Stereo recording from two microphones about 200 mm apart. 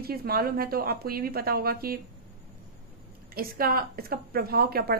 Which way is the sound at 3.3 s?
50° right (ahead or behind).